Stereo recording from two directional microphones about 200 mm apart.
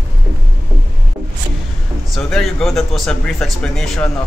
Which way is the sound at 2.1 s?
Centre (ahead or behind).